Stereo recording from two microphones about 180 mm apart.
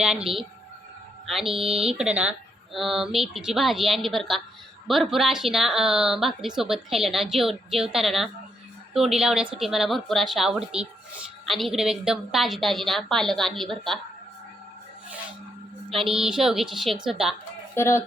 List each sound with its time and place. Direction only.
0.0 s a woman's voice: 5° right (ahead or behind)
1.6 s speech: 30° right (ahead or behind)
1.9 s a woman's voice: 5° right (ahead or behind)
16.0 s a woman's voice: 5° right (ahead or behind)
17.7 s speech: 15° left (ahead or behind)